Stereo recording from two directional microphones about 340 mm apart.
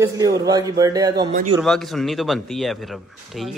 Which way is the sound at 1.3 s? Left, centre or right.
Right.